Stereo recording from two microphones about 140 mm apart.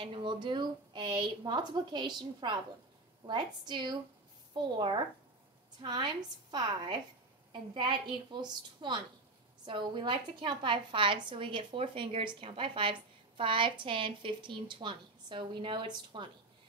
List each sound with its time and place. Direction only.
0.0 s a woman's voice: 35° right (ahead or behind)